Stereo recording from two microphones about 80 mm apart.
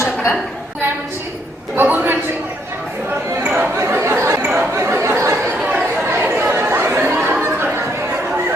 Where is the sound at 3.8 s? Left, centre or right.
Right.